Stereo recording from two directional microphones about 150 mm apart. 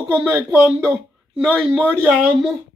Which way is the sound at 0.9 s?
5° right (ahead or behind).